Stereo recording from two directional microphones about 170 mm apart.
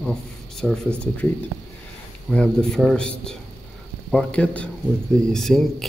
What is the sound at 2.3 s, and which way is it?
Speech, 5° left (ahead or behind).